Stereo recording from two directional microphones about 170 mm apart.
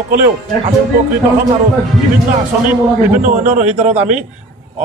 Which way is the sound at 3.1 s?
50° right (ahead or behind).